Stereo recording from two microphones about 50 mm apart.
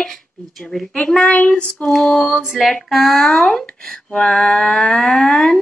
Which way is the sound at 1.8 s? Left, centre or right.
Centre.